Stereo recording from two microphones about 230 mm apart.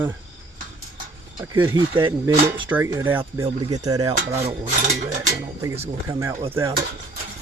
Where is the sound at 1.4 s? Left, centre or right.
Centre.